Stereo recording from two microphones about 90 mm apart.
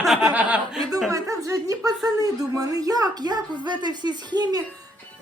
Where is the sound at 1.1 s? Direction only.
35° right (ahead or behind).